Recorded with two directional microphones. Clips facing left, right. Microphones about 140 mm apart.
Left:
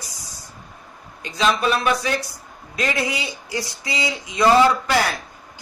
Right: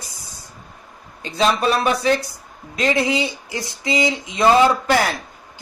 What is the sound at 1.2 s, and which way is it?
Speech, 35° right (ahead or behind).